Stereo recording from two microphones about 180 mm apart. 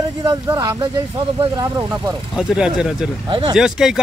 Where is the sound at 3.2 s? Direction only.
30° right (ahead or behind).